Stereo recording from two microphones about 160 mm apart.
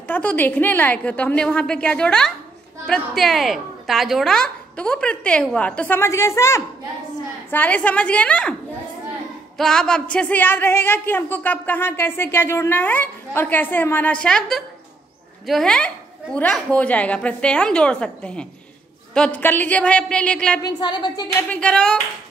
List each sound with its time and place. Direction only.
0.0 s speech: 10° left (ahead or behind)
9.6 s a woman's voice: 5° left (ahead or behind)
20.6 s a woman's voice: 25° left (ahead or behind)
21.4 s speech: 10° left (ahead or behind)